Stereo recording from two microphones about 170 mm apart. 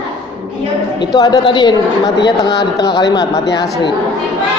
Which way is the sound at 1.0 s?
25° left (ahead or behind).